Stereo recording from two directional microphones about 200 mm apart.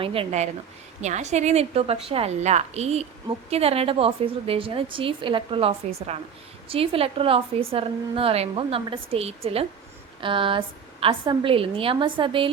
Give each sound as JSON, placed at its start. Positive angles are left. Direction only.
{"t": 0.0, "sound": "a woman's voice", "side_deg": -25}